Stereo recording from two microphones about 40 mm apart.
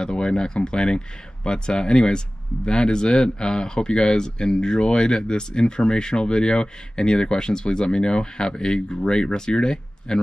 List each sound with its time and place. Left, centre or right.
0.0 s speech: left